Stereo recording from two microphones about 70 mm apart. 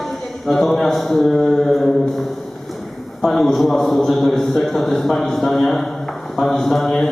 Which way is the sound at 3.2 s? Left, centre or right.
Centre.